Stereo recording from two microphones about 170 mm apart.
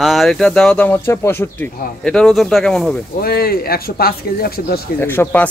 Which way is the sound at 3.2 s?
65° left (ahead or behind).